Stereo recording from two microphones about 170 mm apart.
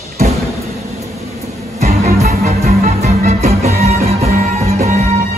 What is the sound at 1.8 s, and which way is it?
Music, 45° right (ahead or behind).